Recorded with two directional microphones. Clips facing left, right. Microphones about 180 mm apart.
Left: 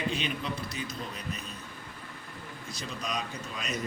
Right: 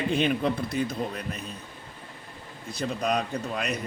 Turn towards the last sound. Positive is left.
turn(degrees=-60)  # may be behind; listen again after turning